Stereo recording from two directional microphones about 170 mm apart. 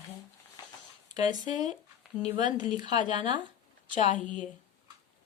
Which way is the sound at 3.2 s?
30° right (ahead or behind).